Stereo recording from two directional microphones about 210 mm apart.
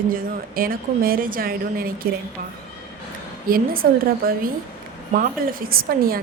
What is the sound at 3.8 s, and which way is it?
A woman's voice, 45° right (ahead or behind).